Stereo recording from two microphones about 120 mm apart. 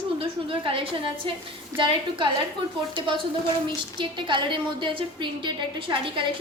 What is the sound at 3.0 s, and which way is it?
A woman's voice, 45° right (ahead or behind).